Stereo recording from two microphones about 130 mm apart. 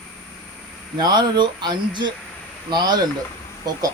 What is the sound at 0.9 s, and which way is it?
Speech, 30° right (ahead or behind).